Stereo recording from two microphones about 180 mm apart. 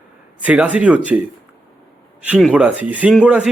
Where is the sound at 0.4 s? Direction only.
10° right (ahead or behind).